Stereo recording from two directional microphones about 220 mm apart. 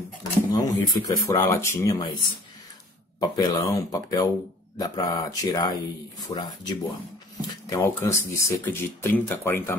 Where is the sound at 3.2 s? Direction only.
15° left (ahead or behind).